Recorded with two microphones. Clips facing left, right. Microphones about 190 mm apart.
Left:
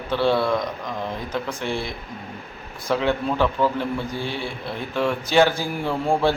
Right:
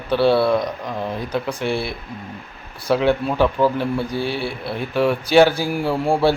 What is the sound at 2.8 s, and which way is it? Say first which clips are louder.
Speech: right 4 dB; 10° right (ahead or behind).